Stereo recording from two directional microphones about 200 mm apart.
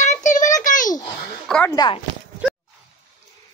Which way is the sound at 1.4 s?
5° left (ahead or behind).